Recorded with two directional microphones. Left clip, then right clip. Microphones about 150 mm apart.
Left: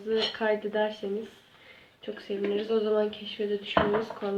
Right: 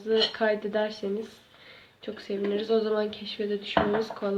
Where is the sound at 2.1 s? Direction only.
40° right (ahead or behind).